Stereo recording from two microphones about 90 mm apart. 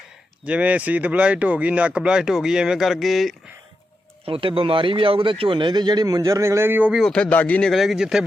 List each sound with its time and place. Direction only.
0.4 s speech: 15° right (ahead or behind); by 3.3 s centre (ahead or behind)
4.3 s speech: 90° right; by 6.9 s 25° right (ahead or behind)
6.9 s a man's voice: 5° left (ahead or behind)
7.7 s speech: centre (ahead or behind)